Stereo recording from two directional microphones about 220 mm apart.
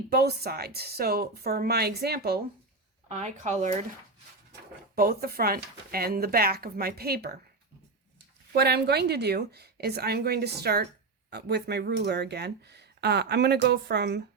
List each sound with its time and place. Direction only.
0.1 s speech: 45° right (ahead or behind)
3.2 s speech: 30° right (ahead or behind)
4.9 s speech: 45° right (ahead or behind)
8.5 s speech: 45° right (ahead or behind)